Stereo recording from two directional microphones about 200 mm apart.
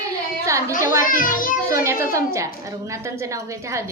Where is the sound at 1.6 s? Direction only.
15° right (ahead or behind).